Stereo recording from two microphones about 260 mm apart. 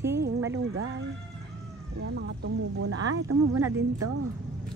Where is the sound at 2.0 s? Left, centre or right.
Right.